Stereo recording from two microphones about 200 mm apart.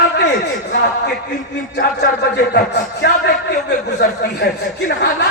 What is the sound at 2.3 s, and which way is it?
Speech, 55° left (ahead or behind).